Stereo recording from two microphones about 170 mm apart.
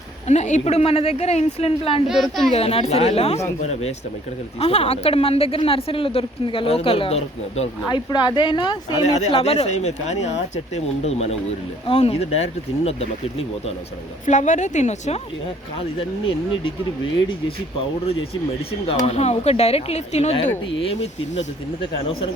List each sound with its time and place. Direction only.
0.3 s speech: 45° left (ahead or behind)
2.0 s a woman's voice: centre (ahead or behind)
2.5 s speech: 35° left (ahead or behind)
7.9 s speech: 25° left (ahead or behind)
9.0 s speech: 40° left (ahead or behind)
14.3 s a woman's voice: 45° left (ahead or behind)
18.9 s speech: 40° left (ahead or behind)
21.8 s speech: 30° left (ahead or behind)